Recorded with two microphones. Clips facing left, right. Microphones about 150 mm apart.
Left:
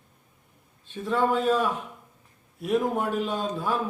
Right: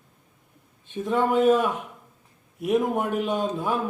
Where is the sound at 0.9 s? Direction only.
20° right (ahead or behind).